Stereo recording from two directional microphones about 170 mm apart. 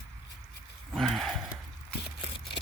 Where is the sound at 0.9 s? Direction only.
Centre (ahead or behind).